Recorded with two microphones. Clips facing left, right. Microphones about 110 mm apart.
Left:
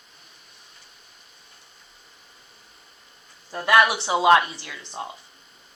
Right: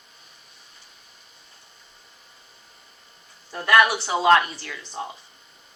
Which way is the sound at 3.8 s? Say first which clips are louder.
Left 1 dB; 25° left (ahead or behind).